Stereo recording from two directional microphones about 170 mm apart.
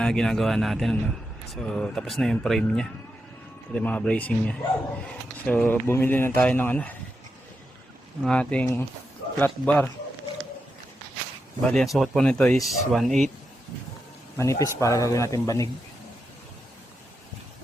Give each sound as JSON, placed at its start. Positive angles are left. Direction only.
{"t": 0.0, "sound": "a man's voice", "side_deg": 5}
{"t": 8.2, "sound": "speech", "side_deg": 5}
{"t": 11.6, "sound": "a man's voice", "side_deg": 5}
{"t": 14.3, "sound": "speech", "side_deg": 15}